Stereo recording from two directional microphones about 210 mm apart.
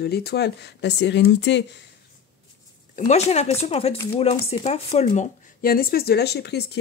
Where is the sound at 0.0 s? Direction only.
50° left (ahead or behind).